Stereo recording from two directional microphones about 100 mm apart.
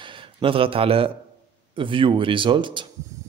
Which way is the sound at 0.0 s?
60° right (ahead or behind).